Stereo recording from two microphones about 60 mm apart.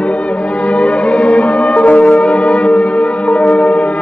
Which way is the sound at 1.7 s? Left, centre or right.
Left.